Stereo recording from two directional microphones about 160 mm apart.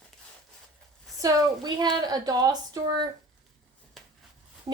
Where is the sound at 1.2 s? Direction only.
20° right (ahead or behind).